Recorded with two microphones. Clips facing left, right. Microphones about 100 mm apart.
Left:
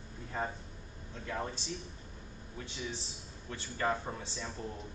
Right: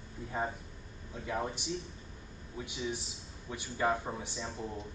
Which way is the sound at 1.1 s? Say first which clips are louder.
Right 3 dB; 15° right (ahead or behind).